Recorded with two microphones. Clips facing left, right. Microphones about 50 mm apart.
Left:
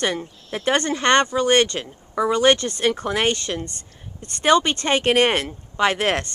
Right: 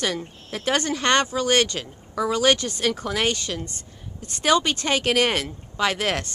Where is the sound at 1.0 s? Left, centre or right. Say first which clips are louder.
Left 3 dB; centre.